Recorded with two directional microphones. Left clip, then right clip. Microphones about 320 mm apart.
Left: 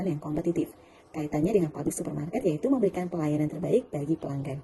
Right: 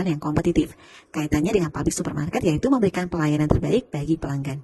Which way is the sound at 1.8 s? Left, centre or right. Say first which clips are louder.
Right 6 dB; right.